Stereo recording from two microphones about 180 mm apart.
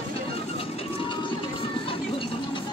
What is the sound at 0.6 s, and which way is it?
Music, 30° left (ahead or behind).